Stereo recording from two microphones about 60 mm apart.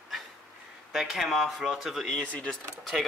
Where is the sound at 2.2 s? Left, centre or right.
Left.